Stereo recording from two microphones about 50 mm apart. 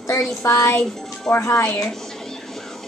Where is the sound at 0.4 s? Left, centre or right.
Left.